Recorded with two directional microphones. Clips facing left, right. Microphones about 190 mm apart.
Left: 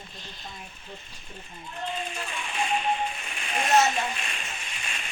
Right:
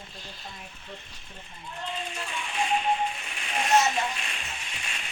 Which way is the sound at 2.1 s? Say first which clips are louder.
Even; 50° left (ahead or behind).